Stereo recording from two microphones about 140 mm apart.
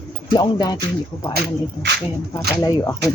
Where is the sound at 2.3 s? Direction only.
25° left (ahead or behind).